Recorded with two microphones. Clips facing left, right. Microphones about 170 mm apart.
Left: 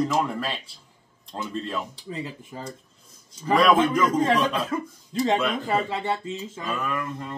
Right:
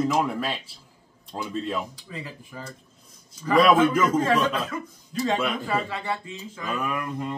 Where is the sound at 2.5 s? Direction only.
30° left (ahead or behind).